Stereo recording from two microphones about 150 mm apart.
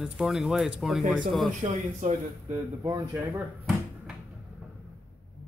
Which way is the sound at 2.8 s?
20° right (ahead or behind).